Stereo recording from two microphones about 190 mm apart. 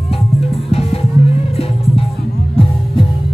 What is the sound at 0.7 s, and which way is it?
Music, 30° left (ahead or behind).